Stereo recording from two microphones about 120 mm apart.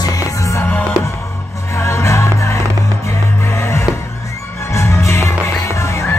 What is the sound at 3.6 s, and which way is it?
Music, 20° left (ahead or behind).